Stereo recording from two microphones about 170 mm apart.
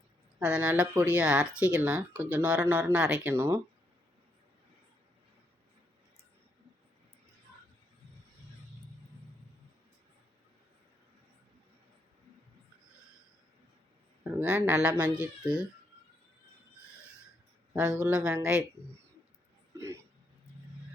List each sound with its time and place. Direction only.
0.3 s speech: 10° right (ahead or behind)
14.3 s speech: 10° right (ahead or behind)
17.7 s speech: 5° right (ahead or behind)